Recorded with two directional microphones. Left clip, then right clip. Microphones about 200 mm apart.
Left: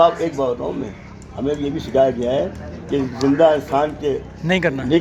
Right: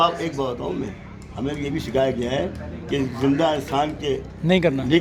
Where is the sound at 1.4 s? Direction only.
35° right (ahead or behind).